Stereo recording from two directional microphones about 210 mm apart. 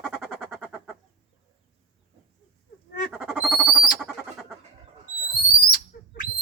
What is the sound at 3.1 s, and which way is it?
Squawk, centre (ahead or behind).